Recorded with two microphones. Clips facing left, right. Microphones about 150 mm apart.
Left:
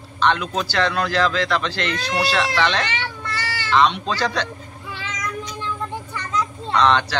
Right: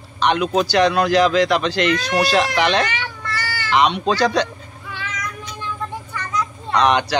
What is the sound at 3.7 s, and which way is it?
Speech, 15° right (ahead or behind).